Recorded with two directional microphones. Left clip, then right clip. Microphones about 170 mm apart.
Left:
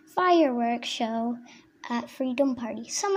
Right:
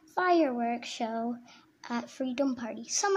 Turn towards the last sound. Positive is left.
turn(degrees=0)  # may be behind; listen again after turning